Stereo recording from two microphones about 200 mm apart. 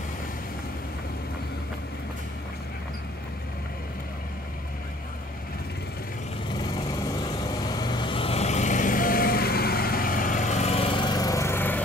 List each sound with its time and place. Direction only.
7.2 s vehicle: 20° left (ahead or behind)